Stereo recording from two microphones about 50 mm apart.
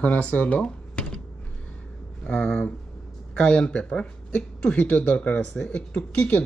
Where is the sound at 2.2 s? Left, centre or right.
Centre.